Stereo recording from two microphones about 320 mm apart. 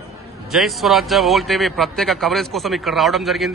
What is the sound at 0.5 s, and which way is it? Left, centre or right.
A man's voice, centre.